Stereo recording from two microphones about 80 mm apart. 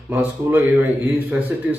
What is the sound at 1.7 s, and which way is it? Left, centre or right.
Speech, centre.